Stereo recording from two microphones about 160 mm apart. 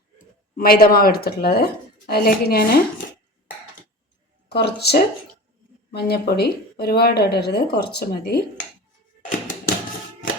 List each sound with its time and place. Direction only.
0.2 s speech: 65° left (ahead or behind)
4.4 s speech: 90° left